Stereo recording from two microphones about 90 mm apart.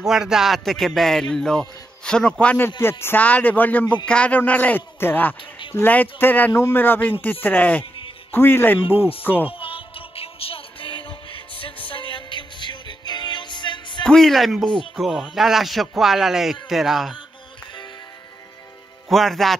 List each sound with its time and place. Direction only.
0.0 s speech: 5° right (ahead or behind); by 2.7 s 15° left (ahead or behind)
2.8 s a man's voice: 25° left (ahead or behind)
9.5 s music: 90° left; by 14.0 s 60° left (ahead or behind)
14.0 s speech: 5° left (ahead or behind)
19.0 s speech: centre (ahead or behind)